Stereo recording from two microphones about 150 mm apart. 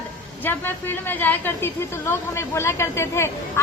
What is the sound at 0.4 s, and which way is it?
A woman's voice, 15° left (ahead or behind).